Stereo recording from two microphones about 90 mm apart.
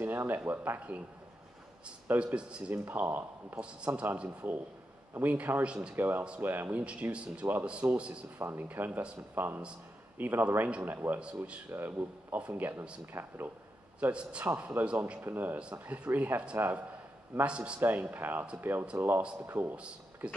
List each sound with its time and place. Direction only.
0.5 s speech: 20° right (ahead or behind)
2.0 s speech: 15° right (ahead or behind)
11.7 s speech: 25° right (ahead or behind)
13.9 s a man's voice: 10° right (ahead or behind)
14.4 s a man's voice: 20° right (ahead or behind)